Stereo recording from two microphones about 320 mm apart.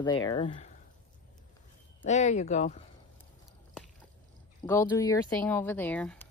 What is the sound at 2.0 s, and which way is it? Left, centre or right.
Speech, left.